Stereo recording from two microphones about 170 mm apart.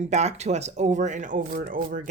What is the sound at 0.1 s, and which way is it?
Speech, 40° right (ahead or behind).